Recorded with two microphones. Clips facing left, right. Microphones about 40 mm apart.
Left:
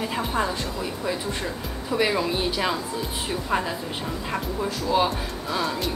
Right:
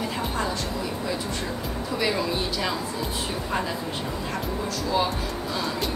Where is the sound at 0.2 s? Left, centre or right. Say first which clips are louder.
Left 4 dB; centre.